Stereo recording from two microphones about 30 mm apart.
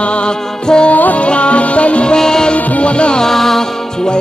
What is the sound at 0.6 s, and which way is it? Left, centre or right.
Music, left.